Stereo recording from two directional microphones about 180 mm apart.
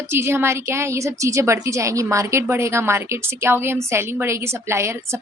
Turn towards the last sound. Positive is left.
turn(degrees=-15)  # may be behind; listen again after turning